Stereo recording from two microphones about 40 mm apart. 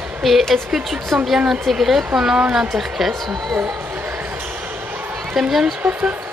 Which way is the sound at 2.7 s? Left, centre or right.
Centre.